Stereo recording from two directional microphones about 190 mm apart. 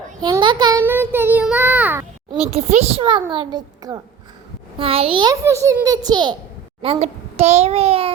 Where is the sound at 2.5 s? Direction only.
35° right (ahead or behind).